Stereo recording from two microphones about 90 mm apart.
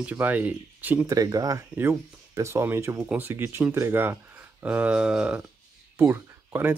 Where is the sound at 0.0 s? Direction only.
20° right (ahead or behind).